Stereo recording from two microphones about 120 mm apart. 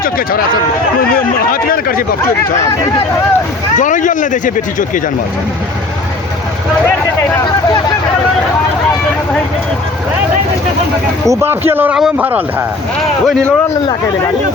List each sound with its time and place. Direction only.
3.8 s speech: 90° left
11.3 s speech: 20° right (ahead or behind)
13.2 s speech: 5° left (ahead or behind)